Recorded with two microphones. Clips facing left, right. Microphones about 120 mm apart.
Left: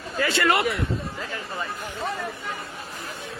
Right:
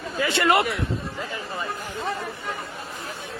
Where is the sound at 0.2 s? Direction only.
20° right (ahead or behind).